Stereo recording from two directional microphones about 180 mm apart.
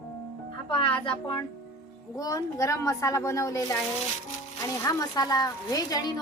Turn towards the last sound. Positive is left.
turn(degrees=20)  # may be behind; listen again after turning